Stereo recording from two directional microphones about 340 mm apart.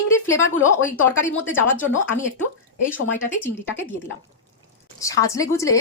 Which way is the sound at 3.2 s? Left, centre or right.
Centre.